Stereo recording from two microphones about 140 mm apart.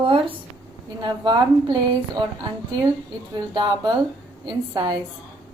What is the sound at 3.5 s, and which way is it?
A woman's voice, 30° right (ahead or behind).